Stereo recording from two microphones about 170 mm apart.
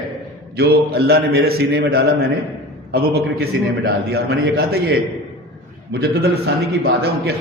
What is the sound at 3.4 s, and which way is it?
A man's voice, 65° right (ahead or behind).